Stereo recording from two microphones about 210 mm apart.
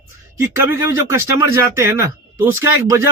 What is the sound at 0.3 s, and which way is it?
Speech, 10° right (ahead or behind).